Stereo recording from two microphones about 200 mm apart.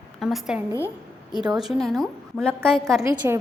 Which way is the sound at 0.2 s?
Centre (ahead or behind).